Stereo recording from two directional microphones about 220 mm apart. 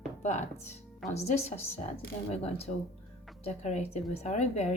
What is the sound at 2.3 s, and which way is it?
A woman's voice, 25° left (ahead or behind).